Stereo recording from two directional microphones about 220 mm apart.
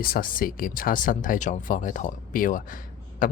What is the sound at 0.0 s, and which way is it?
Speech, 40° left (ahead or behind).